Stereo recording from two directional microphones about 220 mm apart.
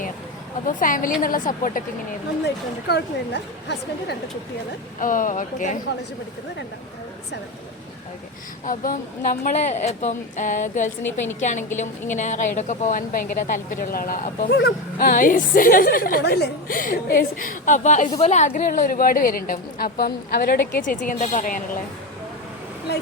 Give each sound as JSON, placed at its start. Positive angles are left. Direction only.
{"t": 0.7, "sound": "speech", "side_deg": 40}
{"t": 2.8, "sound": "a woman's voice", "side_deg": 50}
{"t": 4.9, "sound": "speech", "side_deg": 35}
{"t": 8.6, "sound": "speech", "side_deg": 40}